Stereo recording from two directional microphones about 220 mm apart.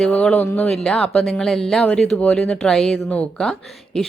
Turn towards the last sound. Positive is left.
turn(degrees=0)  # may be behind; listen again after turning